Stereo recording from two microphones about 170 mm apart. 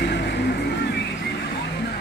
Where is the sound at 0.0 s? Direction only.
90° left.